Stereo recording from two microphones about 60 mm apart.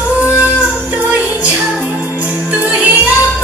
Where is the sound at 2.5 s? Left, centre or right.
Right.